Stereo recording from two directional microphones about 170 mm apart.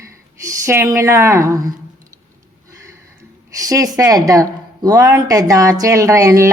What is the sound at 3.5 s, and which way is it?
Speech, 20° right (ahead or behind).